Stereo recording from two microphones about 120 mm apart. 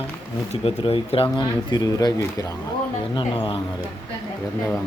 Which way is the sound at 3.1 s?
45° left (ahead or behind).